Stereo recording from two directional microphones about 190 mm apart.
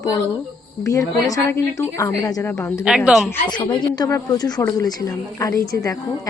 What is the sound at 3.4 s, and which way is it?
A woman's voice, 25° left (ahead or behind).